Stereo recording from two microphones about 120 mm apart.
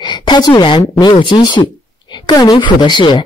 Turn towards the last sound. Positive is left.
turn(degrees=40)  # may be behind; listen again after turning